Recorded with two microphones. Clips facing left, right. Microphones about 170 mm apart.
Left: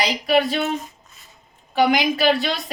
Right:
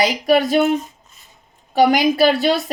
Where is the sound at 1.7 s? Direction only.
40° right (ahead or behind).